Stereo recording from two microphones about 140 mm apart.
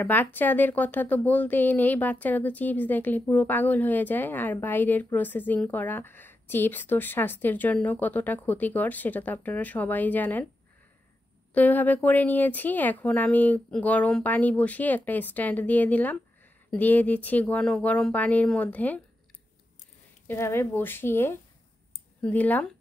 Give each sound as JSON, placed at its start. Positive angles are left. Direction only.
{"t": 0.0, "sound": "speech", "side_deg": 15}
{"t": 11.5, "sound": "speech", "side_deg": 10}
{"t": 20.2, "sound": "speech", "side_deg": 20}